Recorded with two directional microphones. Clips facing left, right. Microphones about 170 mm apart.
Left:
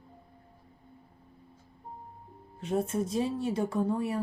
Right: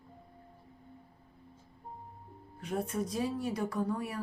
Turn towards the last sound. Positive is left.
turn(degrees=25)  # may be behind; listen again after turning